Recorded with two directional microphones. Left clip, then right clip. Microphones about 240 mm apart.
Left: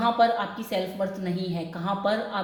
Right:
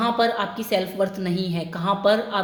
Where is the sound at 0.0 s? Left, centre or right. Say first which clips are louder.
Right 1 dB; right.